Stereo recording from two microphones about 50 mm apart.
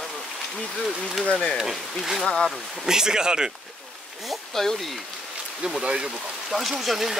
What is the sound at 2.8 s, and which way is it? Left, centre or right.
Speech, centre.